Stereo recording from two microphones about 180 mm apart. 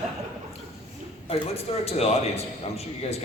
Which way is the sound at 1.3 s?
35° left (ahead or behind).